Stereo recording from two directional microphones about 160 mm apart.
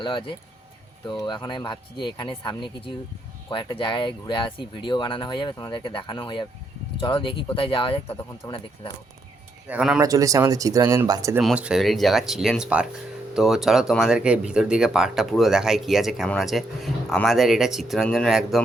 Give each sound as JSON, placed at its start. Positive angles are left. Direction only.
{"t": 0.0, "sound": "speech", "side_deg": 30}
{"t": 9.6, "sound": "speech", "side_deg": -5}
{"t": 10.0, "sound": "speech", "side_deg": -20}
{"t": 11.3, "sound": "speech", "side_deg": -5}